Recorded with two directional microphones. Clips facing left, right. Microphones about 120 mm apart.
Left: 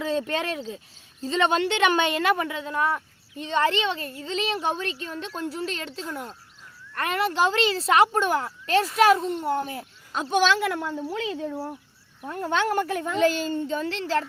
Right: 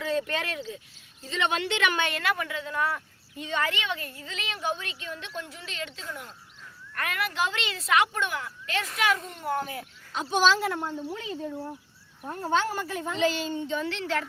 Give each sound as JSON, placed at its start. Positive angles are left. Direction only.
{"t": 0.0, "sound": "a child's voice", "side_deg": 30}
{"t": 10.1, "sound": "a woman's voice", "side_deg": 50}
{"t": 12.3, "sound": "a child's voice", "side_deg": 70}